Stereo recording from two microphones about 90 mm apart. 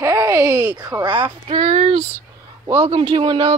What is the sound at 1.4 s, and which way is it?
Speech, 90° right.